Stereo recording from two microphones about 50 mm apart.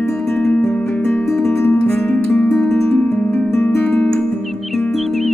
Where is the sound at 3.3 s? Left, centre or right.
Left.